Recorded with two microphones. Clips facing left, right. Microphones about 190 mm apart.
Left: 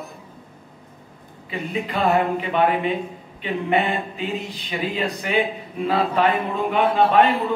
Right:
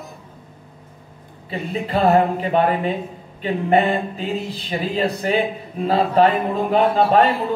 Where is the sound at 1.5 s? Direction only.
35° right (ahead or behind).